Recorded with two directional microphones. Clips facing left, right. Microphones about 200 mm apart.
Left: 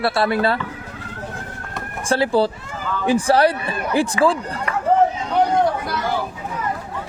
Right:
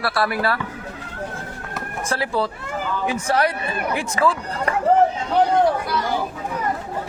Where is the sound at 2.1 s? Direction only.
30° left (ahead or behind).